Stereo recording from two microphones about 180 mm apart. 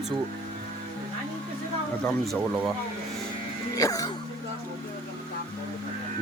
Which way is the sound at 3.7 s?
20° left (ahead or behind).